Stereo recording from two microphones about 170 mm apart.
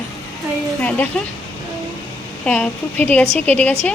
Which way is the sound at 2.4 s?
10° left (ahead or behind).